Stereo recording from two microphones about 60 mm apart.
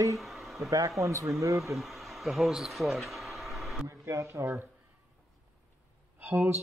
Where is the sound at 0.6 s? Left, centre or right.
Right.